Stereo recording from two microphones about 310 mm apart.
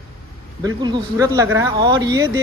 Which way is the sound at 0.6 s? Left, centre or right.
Centre.